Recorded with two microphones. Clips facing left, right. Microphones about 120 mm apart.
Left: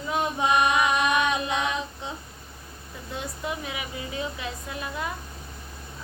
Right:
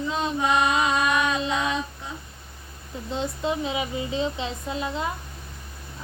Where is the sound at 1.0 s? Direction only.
20° left (ahead or behind).